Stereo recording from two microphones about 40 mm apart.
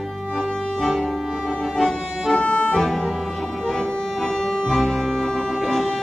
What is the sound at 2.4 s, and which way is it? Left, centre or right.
Music, left.